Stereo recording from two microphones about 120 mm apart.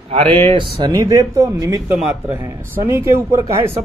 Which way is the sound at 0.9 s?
30° right (ahead or behind).